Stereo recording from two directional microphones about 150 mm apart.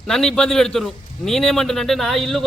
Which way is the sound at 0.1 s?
5° left (ahead or behind).